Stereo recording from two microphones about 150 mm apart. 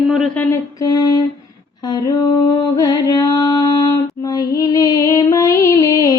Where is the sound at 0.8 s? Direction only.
25° left (ahead or behind).